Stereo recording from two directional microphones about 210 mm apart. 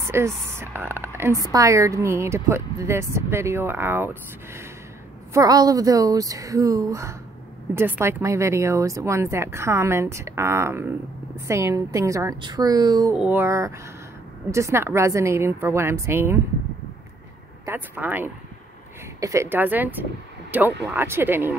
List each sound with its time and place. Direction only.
0.1 s speech: 10° right (ahead or behind)
17.6 s speech: 10° right (ahead or behind)